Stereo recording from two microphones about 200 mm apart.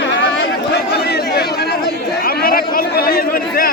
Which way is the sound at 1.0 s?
55° left (ahead or behind).